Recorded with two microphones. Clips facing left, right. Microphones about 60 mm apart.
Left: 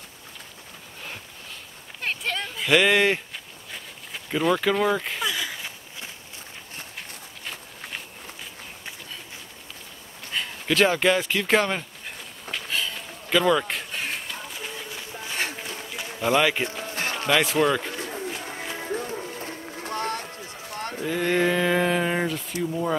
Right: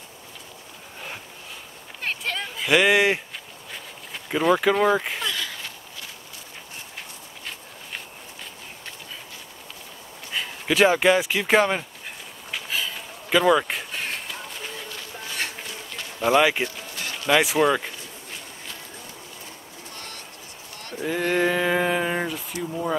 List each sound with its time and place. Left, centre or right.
2.0 s a sound: centre
5.2 s a sound: centre
10.3 s speech: centre
12.4 s a sound: centre
15.5 s run: centre
16.2 s speech: centre
16.6 s music: left
17.3 s speech: centre
17.9 s bird: left
18.8 s music: left
21.0 s speech: centre